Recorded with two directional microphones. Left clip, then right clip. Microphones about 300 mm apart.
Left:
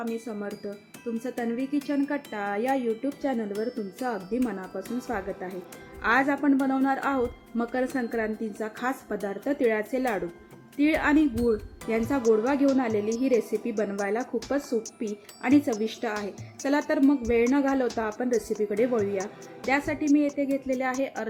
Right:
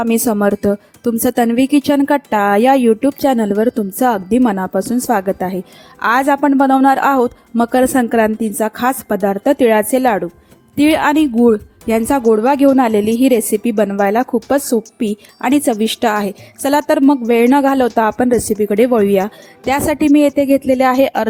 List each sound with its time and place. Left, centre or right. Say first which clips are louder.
0.0 s speech: right 19 dB; right